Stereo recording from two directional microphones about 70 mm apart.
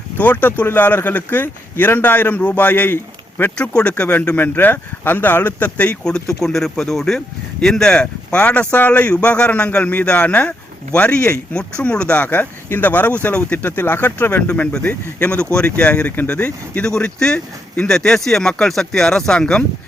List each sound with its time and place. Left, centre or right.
0.2 s speech: left
3.6 s speech: centre